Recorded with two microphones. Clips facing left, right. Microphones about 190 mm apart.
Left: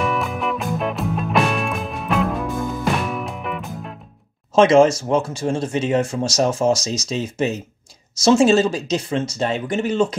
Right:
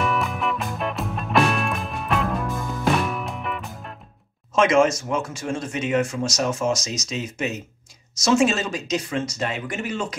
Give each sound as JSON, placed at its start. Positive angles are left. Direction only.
{"t": 0.0, "sound": "music", "side_deg": 0}
{"t": 4.6, "sound": "speech", "side_deg": 30}